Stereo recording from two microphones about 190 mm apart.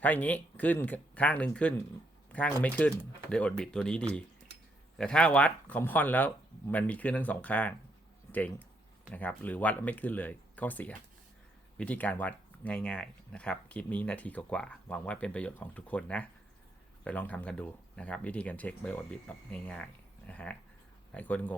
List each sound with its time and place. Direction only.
0.0 s speech: 10° left (ahead or behind)